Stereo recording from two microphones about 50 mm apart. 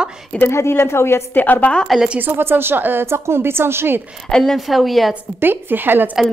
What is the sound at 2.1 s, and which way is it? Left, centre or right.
Speech, right.